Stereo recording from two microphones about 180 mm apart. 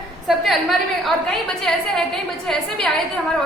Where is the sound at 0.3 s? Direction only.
Centre (ahead or behind).